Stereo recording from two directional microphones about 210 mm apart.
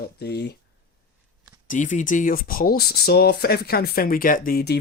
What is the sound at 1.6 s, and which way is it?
Speech, 35° left (ahead or behind).